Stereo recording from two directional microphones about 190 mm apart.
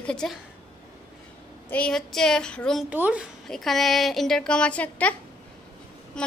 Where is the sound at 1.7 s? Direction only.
5° left (ahead or behind).